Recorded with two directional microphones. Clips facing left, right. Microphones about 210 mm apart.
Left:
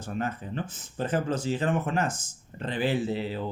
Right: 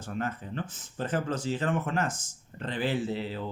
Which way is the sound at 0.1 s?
15° left (ahead or behind).